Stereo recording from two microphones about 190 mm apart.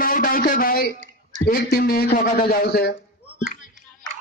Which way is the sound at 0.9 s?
40° right (ahead or behind).